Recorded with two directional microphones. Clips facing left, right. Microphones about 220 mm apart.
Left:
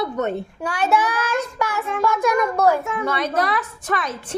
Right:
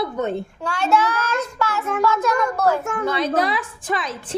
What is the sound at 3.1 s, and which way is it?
Speech, 30° right (ahead or behind).